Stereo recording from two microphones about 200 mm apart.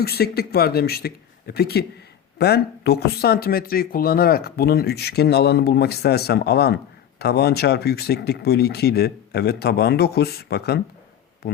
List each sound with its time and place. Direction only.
0.0 s speech: 50° left (ahead or behind)